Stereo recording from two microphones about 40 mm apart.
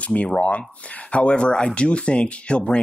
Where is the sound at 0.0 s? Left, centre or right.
Left.